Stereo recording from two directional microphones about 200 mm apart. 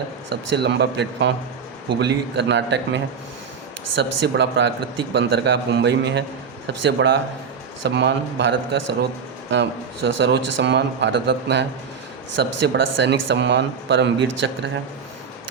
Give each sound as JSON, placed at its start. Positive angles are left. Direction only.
{"t": 0.3, "sound": "speech", "side_deg": -60}
{"t": 10.2, "sound": "speech", "side_deg": -60}